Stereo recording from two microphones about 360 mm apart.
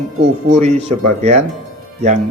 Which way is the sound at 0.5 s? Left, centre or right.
Centre.